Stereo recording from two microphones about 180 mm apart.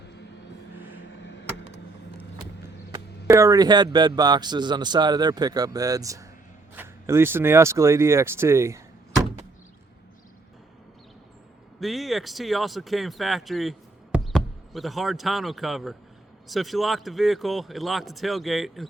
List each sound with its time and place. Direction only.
1.2 s a sound: 75° left (ahead or behind)
2.9 s a man's voice: 15° right (ahead or behind)
11.8 s speech: centre (ahead or behind)